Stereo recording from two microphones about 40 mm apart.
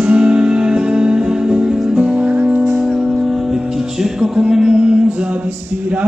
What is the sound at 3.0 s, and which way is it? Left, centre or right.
Music, centre.